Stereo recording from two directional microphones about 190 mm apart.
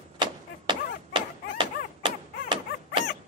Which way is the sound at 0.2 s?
25° right (ahead or behind).